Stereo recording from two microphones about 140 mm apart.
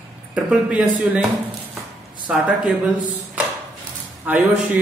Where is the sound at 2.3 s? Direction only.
5° right (ahead or behind).